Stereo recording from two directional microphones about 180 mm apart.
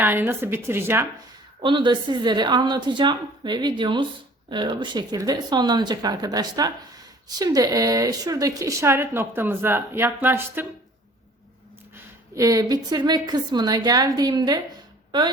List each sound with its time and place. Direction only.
0.0 s a woman's voice: 10° right (ahead or behind)
1.6 s a woman's voice: 25° right (ahead or behind)
12.3 s a woman's voice: 20° right (ahead or behind)